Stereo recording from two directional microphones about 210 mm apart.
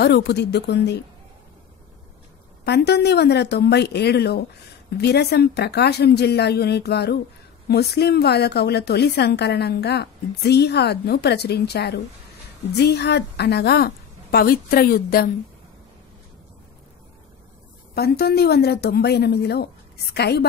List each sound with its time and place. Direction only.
0.0 s a woman's voice: 50° left (ahead or behind)
2.6 s a woman's voice: 50° left (ahead or behind)
17.9 s a woman's voice: 50° left (ahead or behind)